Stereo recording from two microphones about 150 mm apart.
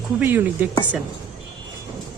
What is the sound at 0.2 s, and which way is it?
Speech, 10° right (ahead or behind).